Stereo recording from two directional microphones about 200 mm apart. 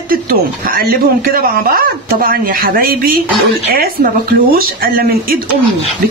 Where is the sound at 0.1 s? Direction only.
45° right (ahead or behind).